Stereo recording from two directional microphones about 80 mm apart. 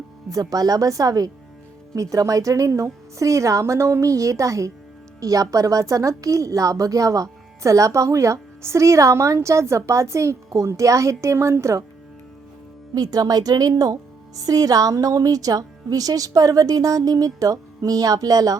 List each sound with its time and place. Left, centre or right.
0.3 s a woman's voice: right
12.9 s a woman's voice: right